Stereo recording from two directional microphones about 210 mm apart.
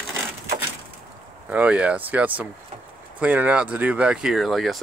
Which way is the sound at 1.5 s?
5° right (ahead or behind).